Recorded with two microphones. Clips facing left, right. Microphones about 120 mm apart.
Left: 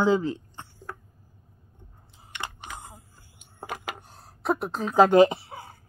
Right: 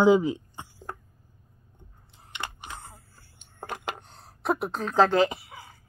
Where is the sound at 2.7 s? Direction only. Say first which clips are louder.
Left 2 dB; 15° left (ahead or behind).